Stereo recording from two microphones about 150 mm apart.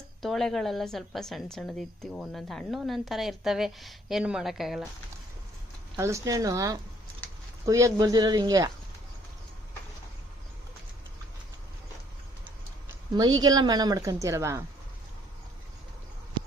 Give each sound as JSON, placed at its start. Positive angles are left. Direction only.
{"t": 0.2, "sound": "a woman's voice", "side_deg": 0}
{"t": 6.0, "sound": "a woman's voice", "side_deg": -20}
{"t": 13.1, "sound": "a woman's voice", "side_deg": -25}
{"t": 16.4, "sound": "a sound", "side_deg": -35}